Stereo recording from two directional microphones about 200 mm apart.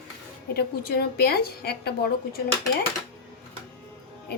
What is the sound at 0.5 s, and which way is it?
A woman's voice, 50° left (ahead or behind).